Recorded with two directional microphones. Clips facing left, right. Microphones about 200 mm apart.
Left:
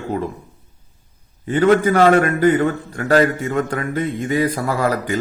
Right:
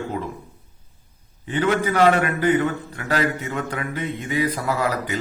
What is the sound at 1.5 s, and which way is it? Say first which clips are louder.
A man's voice: left 7 dB; 45° left (ahead or behind).